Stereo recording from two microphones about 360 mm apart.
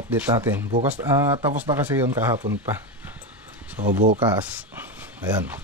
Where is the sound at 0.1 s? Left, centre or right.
Centre.